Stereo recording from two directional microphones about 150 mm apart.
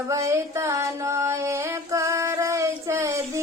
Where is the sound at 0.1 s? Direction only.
20° right (ahead or behind).